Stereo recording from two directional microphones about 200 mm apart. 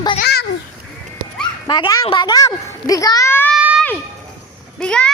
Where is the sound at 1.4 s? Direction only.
20° left (ahead or behind).